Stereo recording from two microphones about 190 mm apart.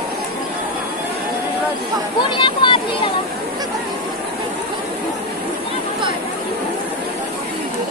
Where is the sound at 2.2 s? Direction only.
25° left (ahead or behind).